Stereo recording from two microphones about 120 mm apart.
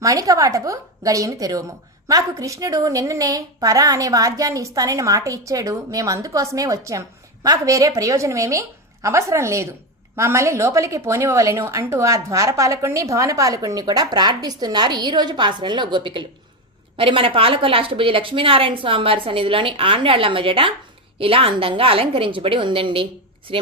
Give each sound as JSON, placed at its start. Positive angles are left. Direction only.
{"t": 0.0, "sound": "a woman's voice", "side_deg": -30}